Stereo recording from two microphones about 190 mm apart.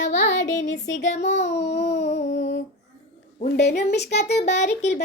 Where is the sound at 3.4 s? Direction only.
60° left (ahead or behind).